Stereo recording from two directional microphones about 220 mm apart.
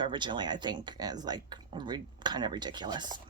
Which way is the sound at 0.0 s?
20° right (ahead or behind).